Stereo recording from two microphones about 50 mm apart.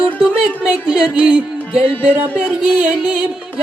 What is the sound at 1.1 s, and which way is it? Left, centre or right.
Music, right.